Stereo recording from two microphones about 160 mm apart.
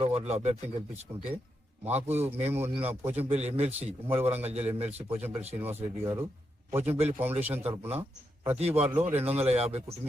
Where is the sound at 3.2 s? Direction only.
40° right (ahead or behind).